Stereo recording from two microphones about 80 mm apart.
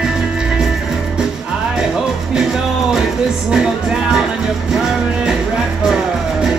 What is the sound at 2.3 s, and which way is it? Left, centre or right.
Music, centre.